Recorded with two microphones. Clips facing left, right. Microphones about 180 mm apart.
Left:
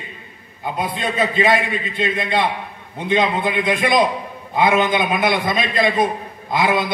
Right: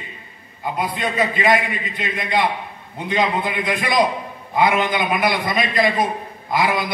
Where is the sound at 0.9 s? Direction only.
25° left (ahead or behind).